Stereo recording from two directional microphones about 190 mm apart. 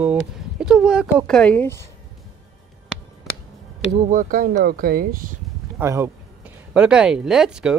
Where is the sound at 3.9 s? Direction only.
40° right (ahead or behind).